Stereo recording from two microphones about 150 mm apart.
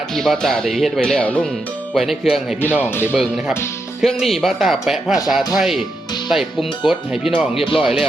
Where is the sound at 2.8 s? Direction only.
15° left (ahead or behind).